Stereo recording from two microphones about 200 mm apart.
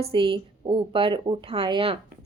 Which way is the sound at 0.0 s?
25° right (ahead or behind).